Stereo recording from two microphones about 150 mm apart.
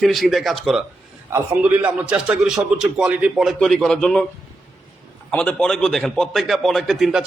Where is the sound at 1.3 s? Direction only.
10° right (ahead or behind); by 4.3 s 5° left (ahead or behind).